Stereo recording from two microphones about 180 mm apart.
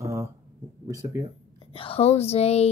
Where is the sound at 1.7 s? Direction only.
30° left (ahead or behind).